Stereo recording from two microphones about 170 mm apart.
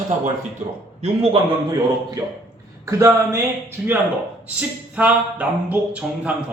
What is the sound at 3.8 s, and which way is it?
A man's voice, 10° right (ahead or behind).